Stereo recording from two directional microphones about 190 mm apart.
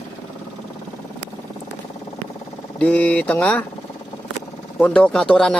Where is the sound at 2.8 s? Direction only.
5° left (ahead or behind).